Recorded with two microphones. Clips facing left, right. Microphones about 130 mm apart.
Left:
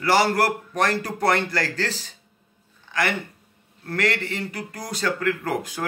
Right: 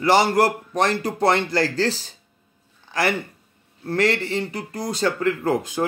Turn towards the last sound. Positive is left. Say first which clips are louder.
# right 5 dB
turn(degrees=-25)  # may be behind; listen again after turning